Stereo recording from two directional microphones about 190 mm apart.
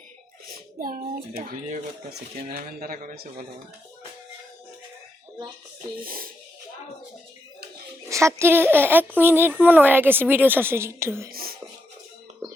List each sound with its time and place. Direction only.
0.4 s a sound: 50° right (ahead or behind)
1.5 s a man's voice: 50° right (ahead or behind)
6.1 s music: 50° right (ahead or behind)
8.1 s speech: 15° right (ahead or behind)
11.3 s speech: 50° right (ahead or behind)